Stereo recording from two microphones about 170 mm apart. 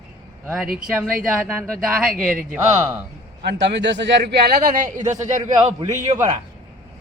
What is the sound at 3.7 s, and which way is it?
Speech, 90° right.